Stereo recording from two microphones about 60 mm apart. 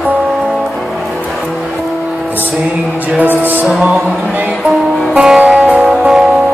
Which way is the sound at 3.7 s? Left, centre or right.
Centre.